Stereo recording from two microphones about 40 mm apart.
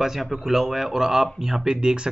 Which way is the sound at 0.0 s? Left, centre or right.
Centre.